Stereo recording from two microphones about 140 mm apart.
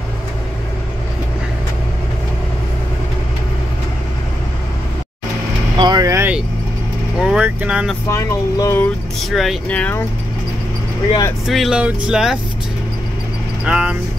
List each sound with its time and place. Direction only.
5.8 s vehicle: 30° right (ahead or behind)
7.2 s speech: 5° right (ahead or behind)
8.1 s speech: 20° left (ahead or behind)
9.3 s speech: centre (ahead or behind)
9.8 s speech: 10° left (ahead or behind)
11.4 s speech: centre (ahead or behind)
13.7 s speech: 5° right (ahead or behind)